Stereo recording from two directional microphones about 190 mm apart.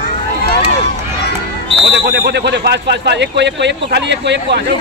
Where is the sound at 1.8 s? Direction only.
65° right (ahead or behind).